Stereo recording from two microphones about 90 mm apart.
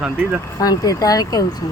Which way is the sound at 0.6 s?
45° left (ahead or behind).